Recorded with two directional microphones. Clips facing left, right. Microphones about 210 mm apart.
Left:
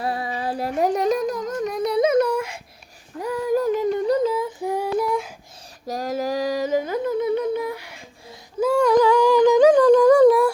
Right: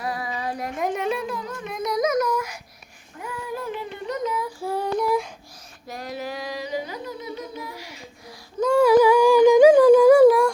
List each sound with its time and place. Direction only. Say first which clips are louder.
0.0 s music: left 3 dB; 30° left (ahead or behind)
3.2 s child singing: left 10 dB; 40° left (ahead or behind); by 4.9 s 15° left (ahead or behind)
4.9 s a sound: even; centre (ahead or behind)
5.9 s humming: left 7 dB; 40° left (ahead or behind); by 7.9 s 60° left (ahead or behind)
8.8 s humming: right 2 dB; 5° right (ahead or behind)